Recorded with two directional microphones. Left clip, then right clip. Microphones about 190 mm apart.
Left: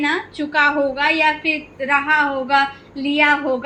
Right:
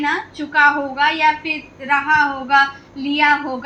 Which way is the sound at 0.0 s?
35° left (ahead or behind).